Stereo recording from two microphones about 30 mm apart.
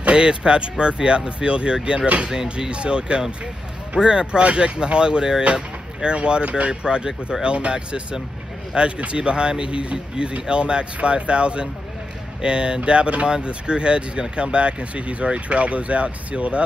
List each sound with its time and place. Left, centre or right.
0.1 s speech: right